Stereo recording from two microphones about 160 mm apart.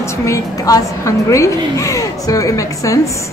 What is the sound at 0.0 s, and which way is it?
A woman's voice, 20° left (ahead or behind).